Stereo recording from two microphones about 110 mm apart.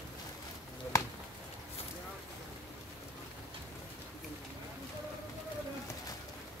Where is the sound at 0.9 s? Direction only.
30° left (ahead or behind).